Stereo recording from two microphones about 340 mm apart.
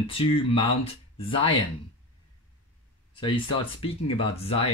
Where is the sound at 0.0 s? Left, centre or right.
Centre.